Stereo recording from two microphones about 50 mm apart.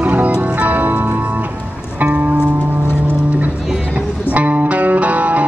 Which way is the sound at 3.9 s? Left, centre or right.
Right.